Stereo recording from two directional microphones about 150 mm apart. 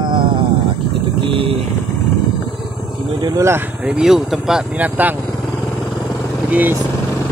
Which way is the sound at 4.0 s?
5° right (ahead or behind).